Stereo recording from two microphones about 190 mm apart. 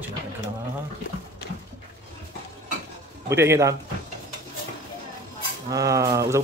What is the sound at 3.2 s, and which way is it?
Speech, 15° right (ahead or behind).